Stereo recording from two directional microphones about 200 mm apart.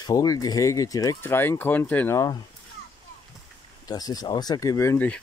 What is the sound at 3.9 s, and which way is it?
Speech, 20° left (ahead or behind).